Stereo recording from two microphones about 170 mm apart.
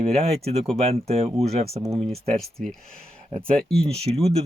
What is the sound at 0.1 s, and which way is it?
Speech, 35° right (ahead or behind).